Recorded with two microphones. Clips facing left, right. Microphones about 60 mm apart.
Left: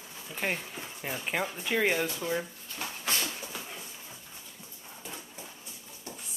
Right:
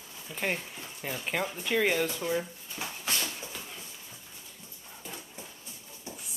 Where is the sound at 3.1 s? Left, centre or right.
Centre.